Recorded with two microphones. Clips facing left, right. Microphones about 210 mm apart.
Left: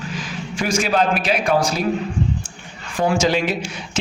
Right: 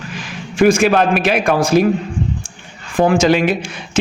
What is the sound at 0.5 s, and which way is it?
A man's voice, 55° right (ahead or behind).